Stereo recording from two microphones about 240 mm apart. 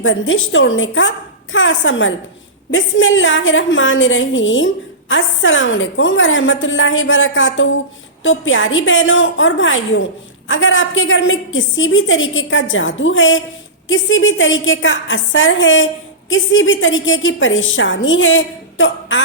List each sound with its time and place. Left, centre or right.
0.0 s a woman's voice: left